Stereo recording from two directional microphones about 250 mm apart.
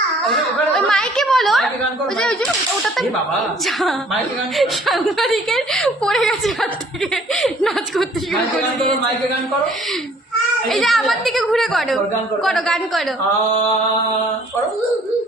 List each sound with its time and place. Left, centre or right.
0.3 s chatter: centre
2.1 s a woman's voice: centre
10.7 s a woman's voice: centre